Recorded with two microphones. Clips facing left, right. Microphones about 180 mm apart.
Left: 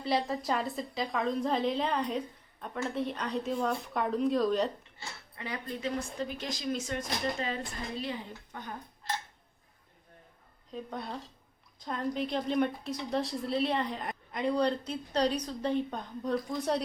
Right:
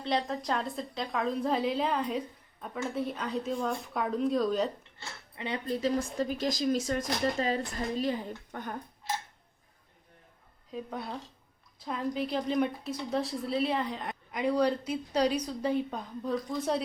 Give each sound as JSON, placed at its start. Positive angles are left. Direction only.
{"t": 0.0, "sound": "a woman's voice", "side_deg": 5}
{"t": 5.4, "sound": "speech", "side_deg": -30}
{"t": 8.5, "sound": "speech", "side_deg": -55}
{"t": 10.7, "sound": "a woman's voice", "side_deg": -5}